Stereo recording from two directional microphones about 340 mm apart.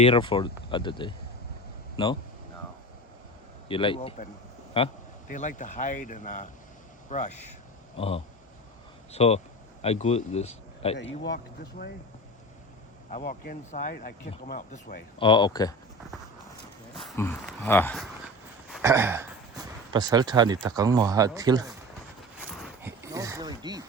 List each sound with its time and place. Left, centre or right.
0.0 s speech: centre
3.7 s speech: centre
11.2 s speech: left
13.1 s speech: left
17.1 s speech: centre
18.7 s speech: centre
22.6 s a sound: centre